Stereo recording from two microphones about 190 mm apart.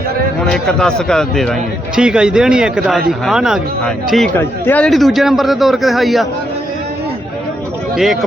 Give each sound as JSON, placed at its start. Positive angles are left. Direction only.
{"t": 0.5, "sound": "a man's voice", "side_deg": 5}
{"t": 7.9, "sound": "a man's voice", "side_deg": 0}